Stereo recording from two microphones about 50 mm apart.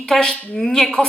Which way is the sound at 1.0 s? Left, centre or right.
Left.